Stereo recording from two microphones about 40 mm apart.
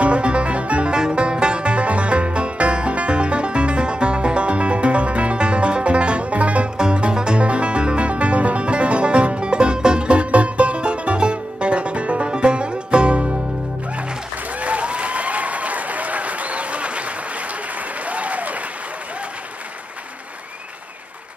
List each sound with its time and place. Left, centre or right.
0.0 s music: right
14.6 s applause: right
18.0 s applause: right